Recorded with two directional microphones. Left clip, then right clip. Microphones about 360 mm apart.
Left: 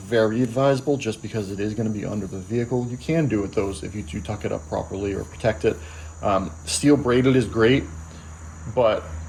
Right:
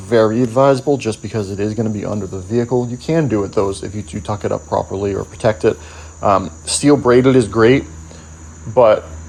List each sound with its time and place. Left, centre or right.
0.1 s speech: centre